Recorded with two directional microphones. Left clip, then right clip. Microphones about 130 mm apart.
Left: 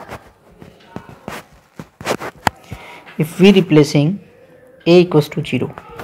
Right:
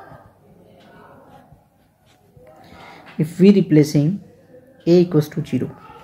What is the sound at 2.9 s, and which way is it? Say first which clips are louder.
A man's voice: left 3 dB; 15° left (ahead or behind).